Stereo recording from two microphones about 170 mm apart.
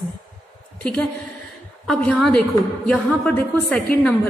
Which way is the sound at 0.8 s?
5° left (ahead or behind).